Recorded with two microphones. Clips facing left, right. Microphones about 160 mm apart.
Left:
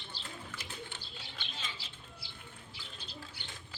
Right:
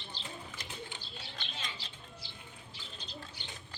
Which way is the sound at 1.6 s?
10° left (ahead or behind).